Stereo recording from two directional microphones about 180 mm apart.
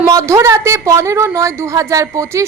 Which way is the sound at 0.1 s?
15° right (ahead or behind).